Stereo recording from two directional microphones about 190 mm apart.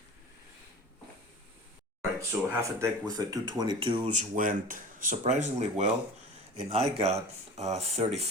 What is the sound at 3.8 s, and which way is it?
Speech, 35° right (ahead or behind).